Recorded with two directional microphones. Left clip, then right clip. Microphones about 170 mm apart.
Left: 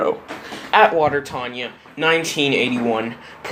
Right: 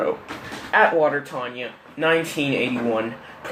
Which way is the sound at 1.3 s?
40° left (ahead or behind).